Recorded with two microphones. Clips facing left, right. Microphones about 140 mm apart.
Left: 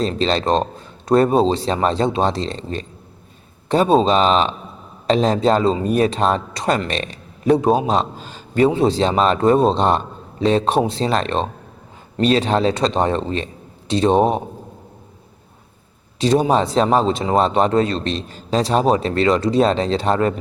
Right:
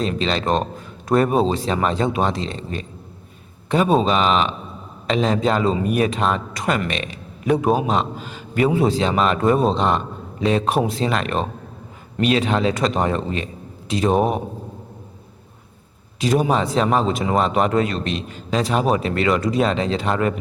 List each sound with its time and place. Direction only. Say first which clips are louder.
0.0 s a man's voice: left 3 dB; 35° left (ahead or behind)
16.2 s speech: left 3 dB; 30° left (ahead or behind)